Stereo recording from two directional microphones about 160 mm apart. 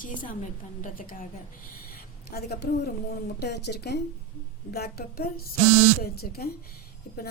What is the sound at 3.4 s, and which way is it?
Speech, 90° left.